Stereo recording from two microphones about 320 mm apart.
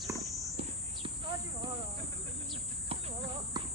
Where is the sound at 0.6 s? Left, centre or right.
Centre.